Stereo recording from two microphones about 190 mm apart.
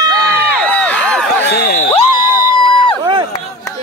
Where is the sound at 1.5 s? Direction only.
55° left (ahead or behind).